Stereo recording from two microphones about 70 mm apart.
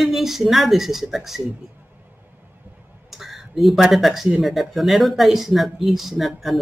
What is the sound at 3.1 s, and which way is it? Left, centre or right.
Speech, centre.